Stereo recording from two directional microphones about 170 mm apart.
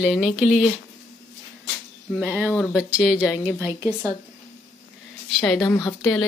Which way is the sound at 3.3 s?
5° right (ahead or behind).